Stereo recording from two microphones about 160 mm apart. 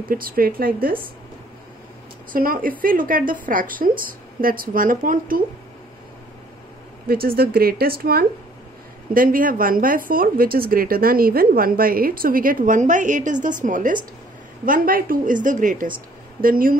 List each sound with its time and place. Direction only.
0.1 s a woman's voice: 65° right (ahead or behind)
2.3 s a woman's voice: 60° right (ahead or behind)
7.1 s a woman's voice: 70° right (ahead or behind)
9.1 s a woman's voice: 60° right (ahead or behind)